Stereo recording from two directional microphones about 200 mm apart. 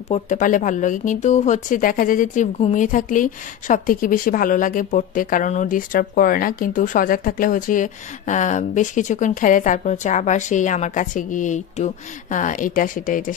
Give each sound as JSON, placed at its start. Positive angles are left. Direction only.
{"t": 0.1, "sound": "speech", "side_deg": 40}